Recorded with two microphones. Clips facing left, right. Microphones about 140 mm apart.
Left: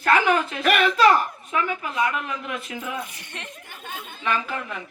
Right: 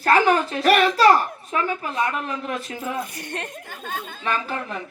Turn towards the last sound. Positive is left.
turn(degrees=-35)  # may be behind; listen again after turning